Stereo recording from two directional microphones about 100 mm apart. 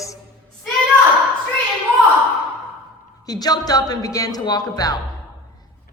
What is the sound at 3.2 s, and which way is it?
A man's voice, 40° left (ahead or behind).